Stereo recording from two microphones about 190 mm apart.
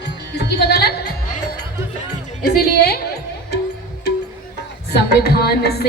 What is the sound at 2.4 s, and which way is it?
Music, 55° left (ahead or behind).